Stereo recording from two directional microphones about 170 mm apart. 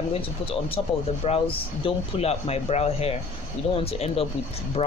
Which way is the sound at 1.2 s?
35° left (ahead or behind).